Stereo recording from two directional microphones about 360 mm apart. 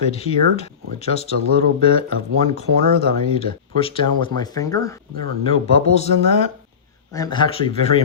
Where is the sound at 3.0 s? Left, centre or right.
Centre.